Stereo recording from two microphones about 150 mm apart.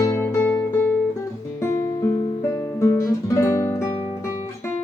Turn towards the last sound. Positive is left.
turn(degrees=20)  # may be behind; listen again after turning